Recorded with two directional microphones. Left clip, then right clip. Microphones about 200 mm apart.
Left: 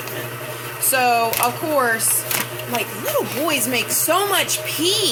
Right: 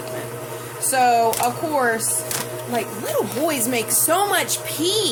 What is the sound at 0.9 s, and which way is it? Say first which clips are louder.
Speech: right 1 dB; 15° right (ahead or behind).